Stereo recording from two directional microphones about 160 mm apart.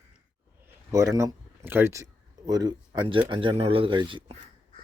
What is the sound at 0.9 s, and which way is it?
Speech, 20° right (ahead or behind).